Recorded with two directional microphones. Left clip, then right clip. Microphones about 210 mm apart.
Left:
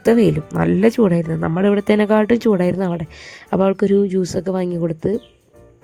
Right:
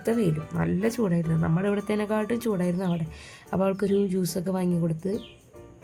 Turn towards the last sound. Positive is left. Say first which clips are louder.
# left 8 dB
turn(degrees=40)  # may be behind; listen again after turning